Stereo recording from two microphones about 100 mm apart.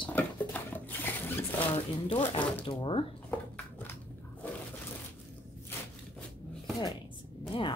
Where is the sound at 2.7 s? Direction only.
55° left (ahead or behind).